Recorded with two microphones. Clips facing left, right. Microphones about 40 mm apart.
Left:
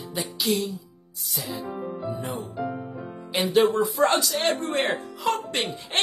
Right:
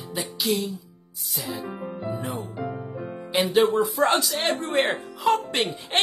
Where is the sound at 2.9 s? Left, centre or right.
Centre.